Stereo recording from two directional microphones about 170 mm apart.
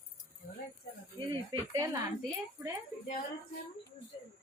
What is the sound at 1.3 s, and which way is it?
Speech, 20° right (ahead or behind).